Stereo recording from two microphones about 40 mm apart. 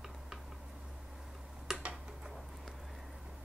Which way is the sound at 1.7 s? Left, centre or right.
Centre.